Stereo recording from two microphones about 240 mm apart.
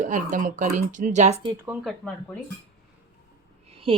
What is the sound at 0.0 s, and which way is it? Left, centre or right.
Speech, right.